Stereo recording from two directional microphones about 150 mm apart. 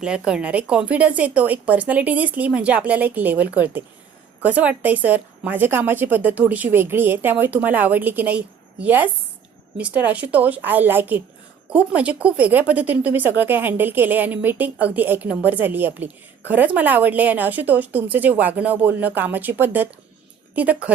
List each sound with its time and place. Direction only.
0.0 s speech: 5° right (ahead or behind)